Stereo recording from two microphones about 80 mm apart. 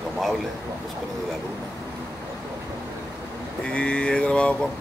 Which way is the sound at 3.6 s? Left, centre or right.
Centre.